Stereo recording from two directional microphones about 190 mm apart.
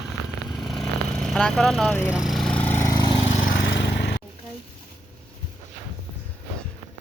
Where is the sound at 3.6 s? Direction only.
65° left (ahead or behind).